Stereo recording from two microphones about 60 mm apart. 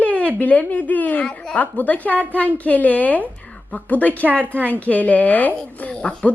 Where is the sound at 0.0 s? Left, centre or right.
Left.